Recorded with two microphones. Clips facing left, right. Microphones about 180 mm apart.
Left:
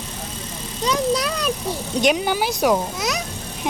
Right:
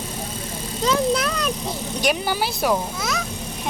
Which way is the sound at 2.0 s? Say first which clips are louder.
Left 4 dB; 20° left (ahead or behind).